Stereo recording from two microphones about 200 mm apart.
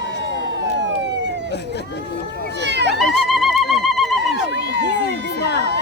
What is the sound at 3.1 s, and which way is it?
Bird, centre (ahead or behind).